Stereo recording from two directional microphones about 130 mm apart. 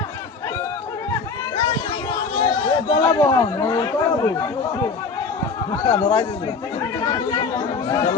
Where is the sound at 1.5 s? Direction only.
40° left (ahead or behind).